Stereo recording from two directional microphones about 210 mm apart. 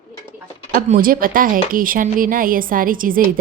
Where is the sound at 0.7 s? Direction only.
40° right (ahead or behind).